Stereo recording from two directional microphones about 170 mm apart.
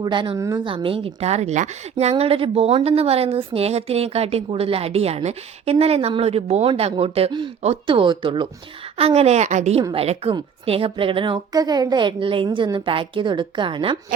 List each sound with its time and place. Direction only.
0.0 s a woman's voice: 30° right (ahead or behind)
0.3 s a woman's voice: 15° right (ahead or behind)
0.6 s a woman's voice: 30° right (ahead or behind)